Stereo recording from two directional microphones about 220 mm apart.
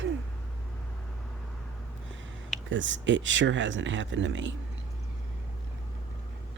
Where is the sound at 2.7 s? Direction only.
55° right (ahead or behind).